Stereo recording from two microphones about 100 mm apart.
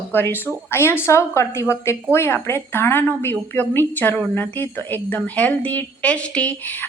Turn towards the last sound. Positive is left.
turn(degrees=15)  # may be behind; listen again after turning